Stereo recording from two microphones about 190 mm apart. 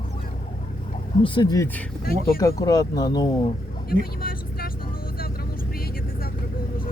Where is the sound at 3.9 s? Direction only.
50° left (ahead or behind).